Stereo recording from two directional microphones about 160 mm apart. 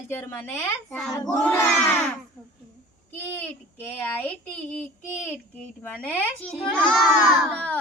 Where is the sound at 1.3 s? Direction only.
10° left (ahead or behind).